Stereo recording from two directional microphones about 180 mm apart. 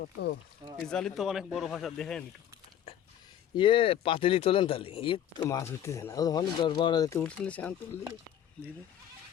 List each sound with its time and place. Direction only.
0.0 s speech: 70° left (ahead or behind)
0.9 s speech: 5° left (ahead or behind)
3.5 s speech: 30° left (ahead or behind)
7.2 s speech: 5° left (ahead or behind)